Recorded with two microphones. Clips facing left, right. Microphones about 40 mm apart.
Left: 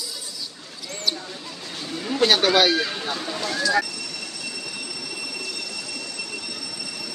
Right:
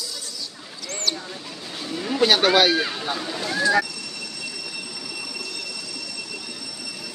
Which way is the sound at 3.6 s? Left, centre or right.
Right.